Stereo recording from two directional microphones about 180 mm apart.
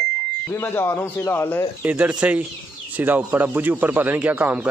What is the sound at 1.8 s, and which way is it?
Speech, 10° right (ahead or behind).